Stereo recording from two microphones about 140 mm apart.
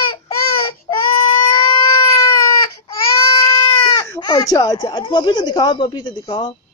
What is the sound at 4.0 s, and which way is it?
A child's voice, 25° left (ahead or behind).